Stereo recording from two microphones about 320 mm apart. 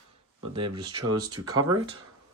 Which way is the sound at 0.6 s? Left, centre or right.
Right.